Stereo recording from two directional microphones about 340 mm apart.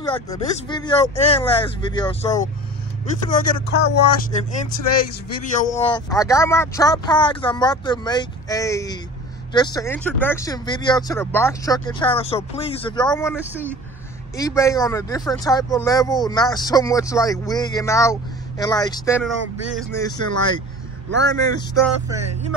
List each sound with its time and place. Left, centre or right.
0.0 s speech: centre
3.3 s speech: left
5.4 s speech: left
13.5 s speech: centre
14.3 s speech: centre